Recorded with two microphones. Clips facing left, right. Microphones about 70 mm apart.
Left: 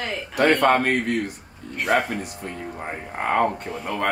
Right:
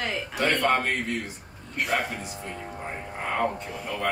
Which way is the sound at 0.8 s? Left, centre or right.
Left.